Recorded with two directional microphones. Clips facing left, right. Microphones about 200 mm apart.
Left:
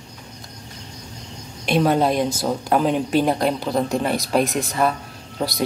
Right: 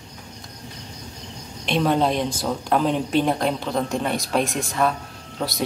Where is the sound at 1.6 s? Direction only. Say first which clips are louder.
Left 2 dB; 5° left (ahead or behind).